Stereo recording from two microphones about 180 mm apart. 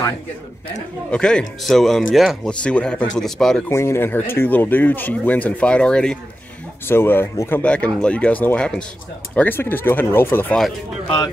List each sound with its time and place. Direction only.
1.1 s speech: 5° left (ahead or behind)
3.6 s speech: 15° left (ahead or behind)